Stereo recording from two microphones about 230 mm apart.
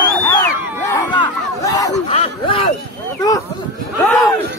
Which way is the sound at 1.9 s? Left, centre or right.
Left.